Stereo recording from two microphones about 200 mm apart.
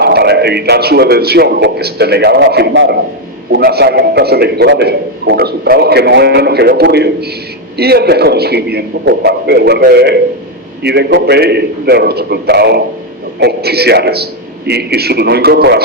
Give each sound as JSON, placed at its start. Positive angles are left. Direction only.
{"t": 0.0, "sound": "a man's voice", "side_deg": -55}